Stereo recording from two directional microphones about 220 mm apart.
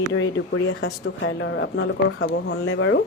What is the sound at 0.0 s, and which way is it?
Speech, 65° left (ahead or behind).